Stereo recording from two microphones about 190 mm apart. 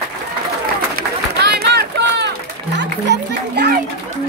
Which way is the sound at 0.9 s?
60° right (ahead or behind).